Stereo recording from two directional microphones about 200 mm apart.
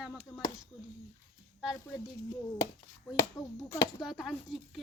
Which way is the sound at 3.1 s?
15° left (ahead or behind).